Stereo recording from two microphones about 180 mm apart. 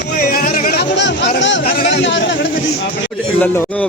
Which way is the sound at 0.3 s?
50° left (ahead or behind).